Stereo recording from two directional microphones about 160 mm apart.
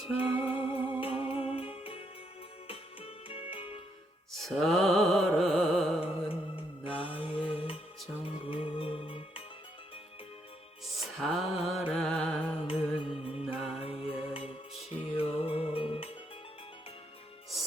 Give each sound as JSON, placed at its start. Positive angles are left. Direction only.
{"t": 0.2, "sound": "music", "side_deg": -10}
{"t": 1.0, "sound": "music", "side_deg": 35}
{"t": 4.4, "sound": "music", "side_deg": 0}
{"t": 6.2, "sound": "music", "side_deg": 35}
{"t": 10.9, "sound": "music", "side_deg": 0}
{"t": 12.6, "sound": "music", "side_deg": 35}
{"t": 13.4, "sound": "music", "side_deg": -5}
{"t": 13.7, "sound": "music", "side_deg": 35}